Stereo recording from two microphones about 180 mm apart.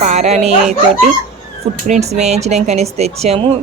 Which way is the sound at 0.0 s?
40° right (ahead or behind).